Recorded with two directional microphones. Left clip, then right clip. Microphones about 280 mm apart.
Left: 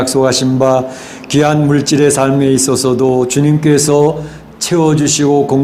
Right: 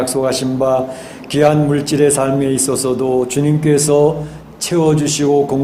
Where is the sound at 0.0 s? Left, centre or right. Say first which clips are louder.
Left 5 dB; left.